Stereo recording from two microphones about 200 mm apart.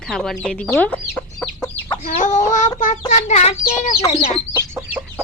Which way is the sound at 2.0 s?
40° left (ahead or behind).